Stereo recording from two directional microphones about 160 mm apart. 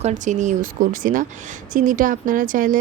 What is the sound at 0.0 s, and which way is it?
Speech, 50° right (ahead or behind).